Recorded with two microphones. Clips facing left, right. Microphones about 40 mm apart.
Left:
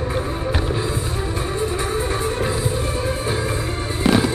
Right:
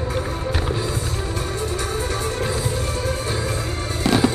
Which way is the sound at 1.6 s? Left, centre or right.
Centre.